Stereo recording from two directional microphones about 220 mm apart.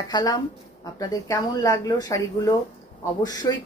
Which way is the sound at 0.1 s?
20° left (ahead or behind).